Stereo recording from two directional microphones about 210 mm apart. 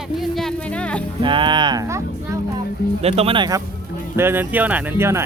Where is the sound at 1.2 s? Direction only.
25° right (ahead or behind).